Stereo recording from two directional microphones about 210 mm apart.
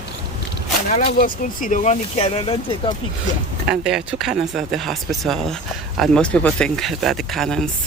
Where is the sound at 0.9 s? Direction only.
35° left (ahead or behind).